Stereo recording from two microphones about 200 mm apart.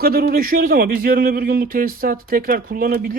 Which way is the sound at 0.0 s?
50° right (ahead or behind).